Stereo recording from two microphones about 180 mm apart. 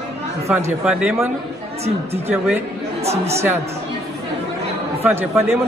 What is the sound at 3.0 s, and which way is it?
Speech, 35° right (ahead or behind).